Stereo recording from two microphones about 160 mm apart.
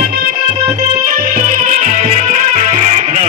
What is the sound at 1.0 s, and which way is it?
Music, 65° right (ahead or behind).